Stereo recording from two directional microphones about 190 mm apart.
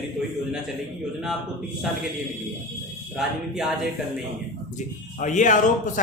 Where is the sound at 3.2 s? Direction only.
Centre (ahead or behind).